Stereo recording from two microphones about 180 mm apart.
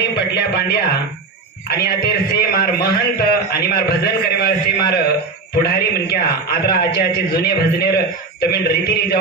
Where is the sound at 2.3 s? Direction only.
60° left (ahead or behind).